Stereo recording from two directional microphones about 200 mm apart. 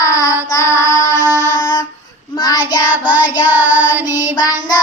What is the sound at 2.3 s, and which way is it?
Child singing, 20° left (ahead or behind).